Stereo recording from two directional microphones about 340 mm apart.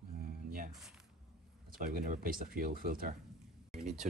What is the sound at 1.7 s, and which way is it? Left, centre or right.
Speech, right.